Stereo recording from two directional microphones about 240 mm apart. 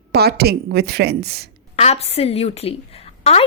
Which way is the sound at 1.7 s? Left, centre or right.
Left.